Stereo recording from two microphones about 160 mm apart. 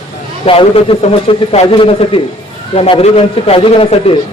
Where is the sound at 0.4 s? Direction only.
35° left (ahead or behind).